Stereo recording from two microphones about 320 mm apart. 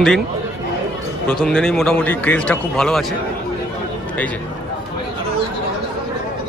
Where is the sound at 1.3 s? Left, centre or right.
Centre.